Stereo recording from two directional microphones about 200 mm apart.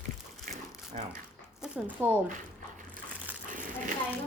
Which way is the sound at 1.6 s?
10° right (ahead or behind).